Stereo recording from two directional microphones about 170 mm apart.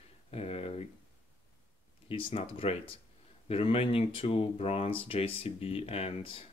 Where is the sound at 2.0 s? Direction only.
30° left (ahead or behind).